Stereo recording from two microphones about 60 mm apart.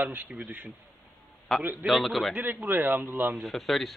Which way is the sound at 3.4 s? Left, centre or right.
Centre.